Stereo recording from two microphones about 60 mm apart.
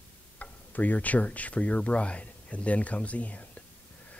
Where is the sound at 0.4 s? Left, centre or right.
Left.